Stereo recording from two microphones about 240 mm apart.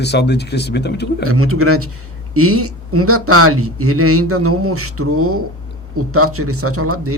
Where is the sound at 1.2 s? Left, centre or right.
Right.